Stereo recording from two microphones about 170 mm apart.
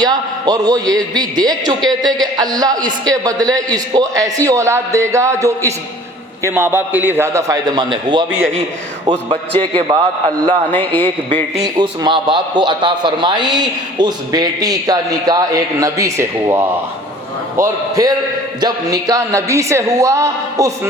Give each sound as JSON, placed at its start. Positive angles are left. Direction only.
{"t": 0.0, "sound": "a man's voice", "side_deg": -25}
{"t": 9.6, "sound": "a man's voice", "side_deg": -30}
{"t": 10.7, "sound": "a man's voice", "side_deg": 10}
{"t": 11.6, "sound": "a man's voice", "side_deg": -25}